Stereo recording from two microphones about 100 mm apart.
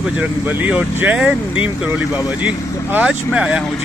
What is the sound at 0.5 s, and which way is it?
Speech, 15° right (ahead or behind).